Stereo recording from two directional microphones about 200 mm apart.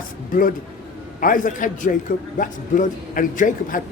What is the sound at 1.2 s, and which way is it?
A man's voice, 40° left (ahead or behind).